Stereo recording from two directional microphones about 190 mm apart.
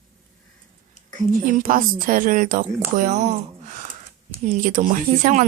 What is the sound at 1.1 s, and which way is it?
Speech, 45° right (ahead or behind).